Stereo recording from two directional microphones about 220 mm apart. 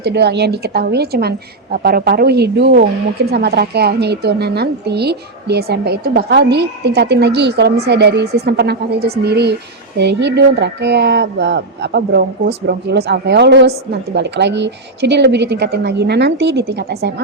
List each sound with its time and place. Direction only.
0.0 s a woman's voice: 50° right (ahead or behind)